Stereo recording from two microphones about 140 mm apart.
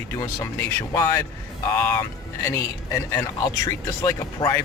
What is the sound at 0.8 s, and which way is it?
Speech, 20° left (ahead or behind).